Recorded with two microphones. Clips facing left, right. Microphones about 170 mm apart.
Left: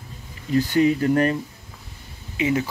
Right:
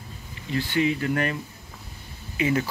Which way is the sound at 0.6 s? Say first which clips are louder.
Left 6 dB; 40° left (ahead or behind).